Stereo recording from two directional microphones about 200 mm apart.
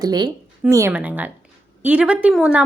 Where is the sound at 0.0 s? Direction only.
20° right (ahead or behind).